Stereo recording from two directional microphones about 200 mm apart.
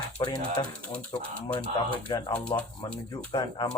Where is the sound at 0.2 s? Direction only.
20° left (ahead or behind).